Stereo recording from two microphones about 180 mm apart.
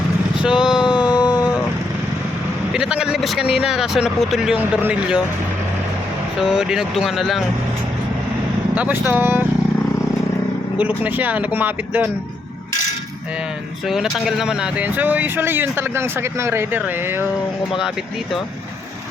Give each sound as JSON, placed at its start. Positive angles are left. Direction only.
{"t": 0.4, "sound": "vehicle", "side_deg": -5}
{"t": 0.9, "sound": "a sound", "side_deg": 25}
{"t": 2.7, "sound": "speech", "side_deg": -5}
{"t": 6.4, "sound": "speech", "side_deg": -5}
{"t": 8.7, "sound": "speech", "side_deg": -10}
{"t": 10.8, "sound": "speech", "side_deg": -10}
{"t": 13.8, "sound": "speech", "side_deg": 0}